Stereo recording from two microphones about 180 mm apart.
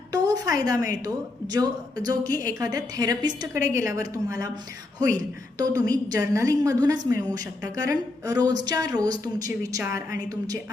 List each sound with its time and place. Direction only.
0.1 s a woman's voice: 20° right (ahead or behind)